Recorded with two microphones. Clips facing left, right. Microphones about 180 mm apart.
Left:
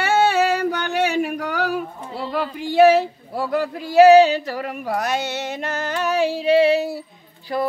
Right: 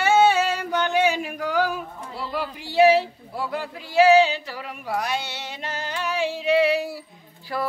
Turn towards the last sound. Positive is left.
turn(degrees=20)  # may be behind; listen again after turning